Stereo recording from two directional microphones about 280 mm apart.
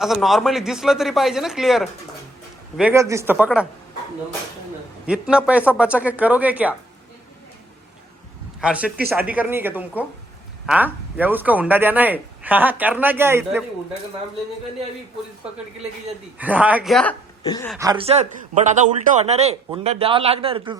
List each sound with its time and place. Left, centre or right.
0.0 s speech: centre
5.0 s speech: centre
8.6 s speech: centre
16.4 s speech: centre
17.7 s a man's voice: centre